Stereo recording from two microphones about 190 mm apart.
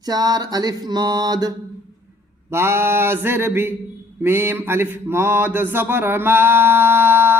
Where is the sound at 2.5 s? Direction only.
15° right (ahead or behind).